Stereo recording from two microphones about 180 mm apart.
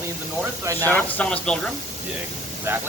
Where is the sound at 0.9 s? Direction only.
10° left (ahead or behind).